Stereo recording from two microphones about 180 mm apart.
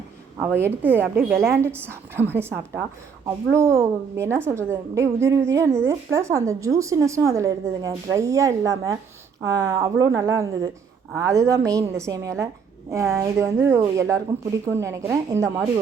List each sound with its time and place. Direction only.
0.3 s a woman's voice: 10° right (ahead or behind)